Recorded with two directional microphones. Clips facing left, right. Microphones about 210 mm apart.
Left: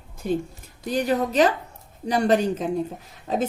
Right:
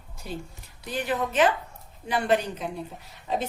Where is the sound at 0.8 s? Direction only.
45° left (ahead or behind).